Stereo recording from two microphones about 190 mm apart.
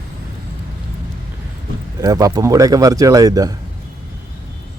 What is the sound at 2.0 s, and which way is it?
A man's voice, 20° right (ahead or behind).